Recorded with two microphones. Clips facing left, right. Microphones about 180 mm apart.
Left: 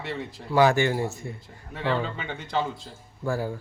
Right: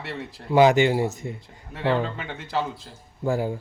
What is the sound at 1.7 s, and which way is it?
Speech, centre (ahead or behind).